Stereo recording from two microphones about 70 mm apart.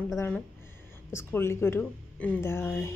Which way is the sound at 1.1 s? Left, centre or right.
Left.